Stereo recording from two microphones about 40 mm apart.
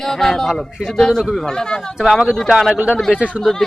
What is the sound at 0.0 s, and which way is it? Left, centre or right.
Speech, centre.